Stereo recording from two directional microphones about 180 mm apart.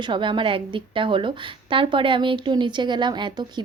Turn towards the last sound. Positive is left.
turn(degrees=-25)  # may be behind; listen again after turning